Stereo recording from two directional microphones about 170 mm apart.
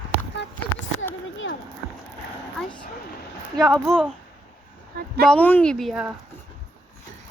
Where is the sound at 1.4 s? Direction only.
90° left.